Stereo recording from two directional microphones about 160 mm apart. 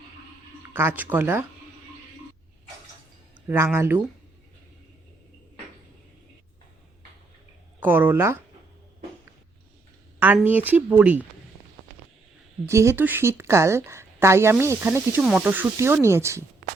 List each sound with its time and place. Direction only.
0.7 s a woman's voice: 15° right (ahead or behind)
3.4 s a woman's voice: 15° right (ahead or behind)
7.8 s a woman's voice: 10° right (ahead or behind)
10.2 s a woman's voice: 10° right (ahead or behind)
12.6 s a woman's voice: 15° right (ahead or behind)